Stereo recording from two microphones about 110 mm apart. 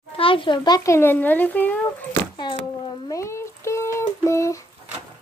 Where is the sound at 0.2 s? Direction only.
50° left (ahead or behind).